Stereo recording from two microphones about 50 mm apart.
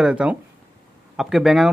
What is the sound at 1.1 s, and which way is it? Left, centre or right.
Speech, centre.